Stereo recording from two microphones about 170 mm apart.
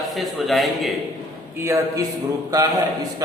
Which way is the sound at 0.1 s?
Centre (ahead or behind).